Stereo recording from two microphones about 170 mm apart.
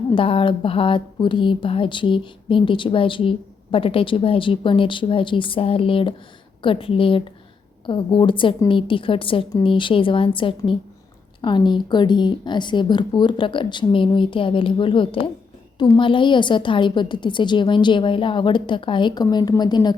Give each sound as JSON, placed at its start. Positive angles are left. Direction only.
{"t": 0.1, "sound": "a woman's voice", "side_deg": 30}